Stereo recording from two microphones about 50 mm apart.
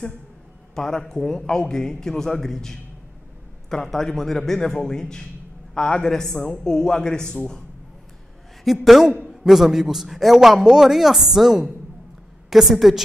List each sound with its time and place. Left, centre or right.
0.7 s a man's voice: centre
6.3 s a man's voice: left
6.6 s a man's voice: centre
8.8 s a man's voice: centre